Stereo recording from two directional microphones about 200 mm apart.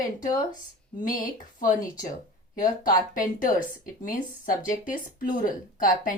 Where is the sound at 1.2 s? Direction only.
40° left (ahead or behind).